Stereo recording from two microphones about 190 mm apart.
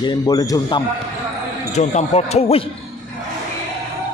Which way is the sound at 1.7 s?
35° left (ahead or behind).